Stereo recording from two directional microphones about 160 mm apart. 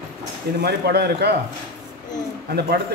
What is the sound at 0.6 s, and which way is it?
Speech, 85° right.